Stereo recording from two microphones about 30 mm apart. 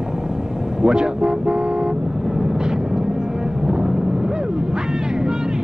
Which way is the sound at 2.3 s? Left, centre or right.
Centre.